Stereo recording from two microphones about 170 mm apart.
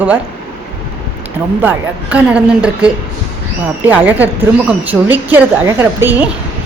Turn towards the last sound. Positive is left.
turn(degrees=-10)  # may be behind; listen again after turning